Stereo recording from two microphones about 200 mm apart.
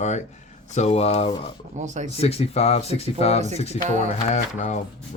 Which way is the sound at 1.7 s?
35° right (ahead or behind).